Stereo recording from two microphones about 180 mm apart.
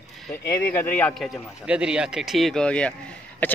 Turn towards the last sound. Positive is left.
turn(degrees=10)  # may be behind; listen again after turning